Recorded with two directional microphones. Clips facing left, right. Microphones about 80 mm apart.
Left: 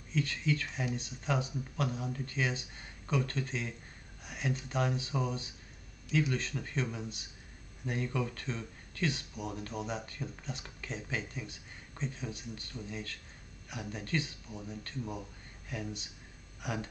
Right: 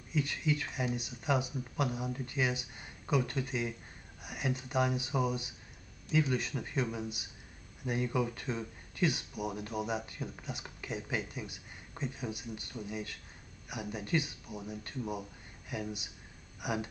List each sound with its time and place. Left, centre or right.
0.1 s speech: centre